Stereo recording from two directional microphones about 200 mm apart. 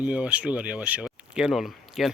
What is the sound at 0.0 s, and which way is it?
Speech, 5° right (ahead or behind).